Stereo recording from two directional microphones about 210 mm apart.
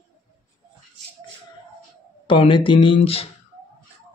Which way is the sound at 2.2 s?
25° left (ahead or behind).